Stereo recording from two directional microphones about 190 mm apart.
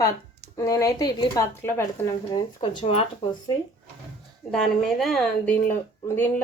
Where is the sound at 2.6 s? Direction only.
30° left (ahead or behind).